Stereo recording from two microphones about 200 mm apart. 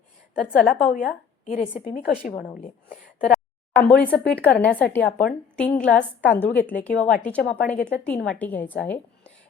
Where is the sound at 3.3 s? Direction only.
5° left (ahead or behind).